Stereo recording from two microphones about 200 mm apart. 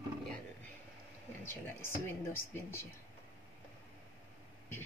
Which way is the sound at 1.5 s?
10° left (ahead or behind).